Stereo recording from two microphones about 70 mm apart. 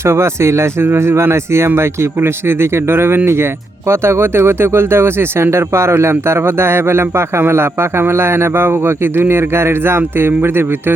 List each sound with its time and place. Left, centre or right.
0.0 s speech: right